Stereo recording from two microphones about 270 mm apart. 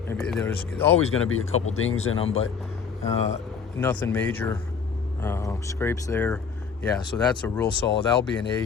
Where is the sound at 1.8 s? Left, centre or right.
Left.